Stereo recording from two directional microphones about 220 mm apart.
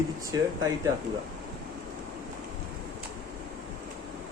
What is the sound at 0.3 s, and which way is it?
Speech, 15° right (ahead or behind).